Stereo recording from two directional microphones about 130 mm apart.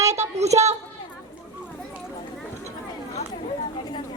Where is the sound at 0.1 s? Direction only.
60° right (ahead or behind).